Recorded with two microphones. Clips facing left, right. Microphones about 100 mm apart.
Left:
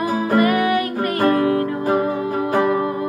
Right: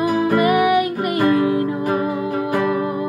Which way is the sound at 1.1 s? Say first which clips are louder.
Right 1 dB; 45° left (ahead or behind).